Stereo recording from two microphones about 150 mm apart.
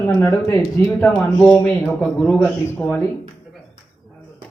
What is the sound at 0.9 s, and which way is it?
A man's voice, 10° left (ahead or behind).